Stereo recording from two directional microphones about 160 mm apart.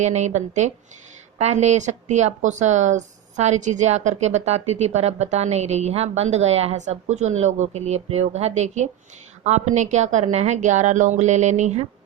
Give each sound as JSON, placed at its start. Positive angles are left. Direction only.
{"t": 0.0, "sound": "speech", "side_deg": -45}